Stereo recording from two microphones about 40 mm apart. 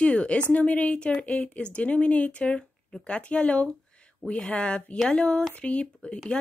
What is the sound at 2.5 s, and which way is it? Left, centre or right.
A woman's voice, left.